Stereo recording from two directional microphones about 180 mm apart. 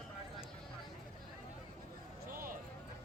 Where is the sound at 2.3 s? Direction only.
50° right (ahead or behind).